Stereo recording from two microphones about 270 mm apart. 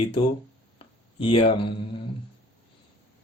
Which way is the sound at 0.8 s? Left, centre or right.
Centre.